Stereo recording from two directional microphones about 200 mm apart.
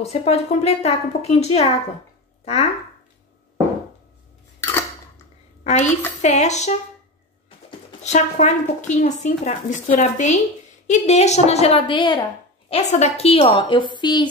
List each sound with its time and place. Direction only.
0.0 s a woman's voice: 30° left (ahead or behind)
5.6 s a sound: 35° left (ahead or behind)
6.2 s a woman's voice: 35° left (ahead or behind)
8.0 s a woman's voice: 35° left (ahead or behind)